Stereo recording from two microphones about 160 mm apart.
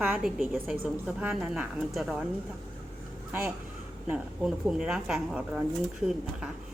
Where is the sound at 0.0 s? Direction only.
5° right (ahead or behind).